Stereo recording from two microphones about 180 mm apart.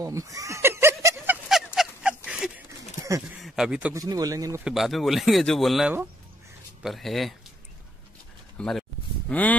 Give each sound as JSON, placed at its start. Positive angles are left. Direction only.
{"t": 0.0, "sound": "a sound", "side_deg": -20}
{"t": 3.9, "sound": "speech", "side_deg": -20}
{"t": 4.6, "sound": "speech", "side_deg": 0}
{"t": 8.5, "sound": "speech", "side_deg": 5}